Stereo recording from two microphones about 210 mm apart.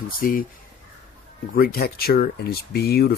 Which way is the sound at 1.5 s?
45° left (ahead or behind).